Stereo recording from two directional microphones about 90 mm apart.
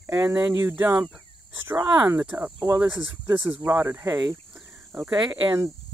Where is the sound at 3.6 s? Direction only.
30° right (ahead or behind).